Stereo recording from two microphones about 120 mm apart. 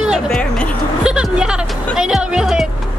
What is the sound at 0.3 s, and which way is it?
Music, 5° left (ahead or behind).